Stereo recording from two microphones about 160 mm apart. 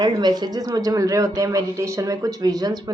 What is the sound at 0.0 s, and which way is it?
Speech, 25° right (ahead or behind).